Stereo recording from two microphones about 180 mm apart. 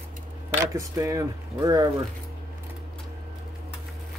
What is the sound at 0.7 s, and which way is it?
Speech, 15° right (ahead or behind).